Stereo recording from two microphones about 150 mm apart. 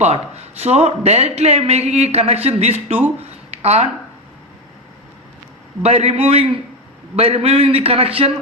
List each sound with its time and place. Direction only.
0.6 s speech: 45° right (ahead or behind)
3.5 s a sound: 45° right (ahead or behind)
5.8 s a man's voice: 45° right (ahead or behind)